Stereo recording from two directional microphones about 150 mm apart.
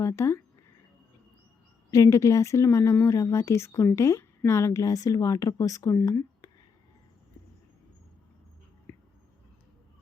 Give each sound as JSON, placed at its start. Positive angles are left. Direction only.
{"t": 0.0, "sound": "speech", "side_deg": 20}
{"t": 1.9, "sound": "a woman's voice", "side_deg": 20}
{"t": 8.9, "sound": "a sound", "side_deg": 15}